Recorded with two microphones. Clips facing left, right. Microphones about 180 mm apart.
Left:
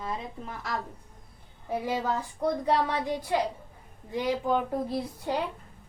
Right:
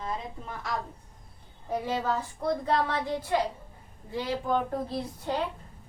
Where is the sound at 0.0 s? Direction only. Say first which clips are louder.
Even; 5° left (ahead or behind).